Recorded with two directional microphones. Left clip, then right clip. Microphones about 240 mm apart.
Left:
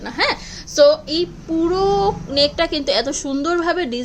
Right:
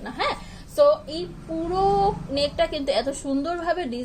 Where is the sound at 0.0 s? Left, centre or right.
Left.